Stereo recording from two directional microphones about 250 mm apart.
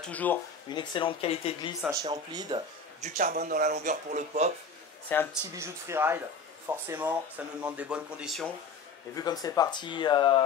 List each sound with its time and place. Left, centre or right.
0.0 s speech: centre
0.7 s speech: centre
1.8 s speech: centre
3.0 s a man's voice: right
5.1 s speech: centre
5.5 s speech: centre
9.1 s speech: centre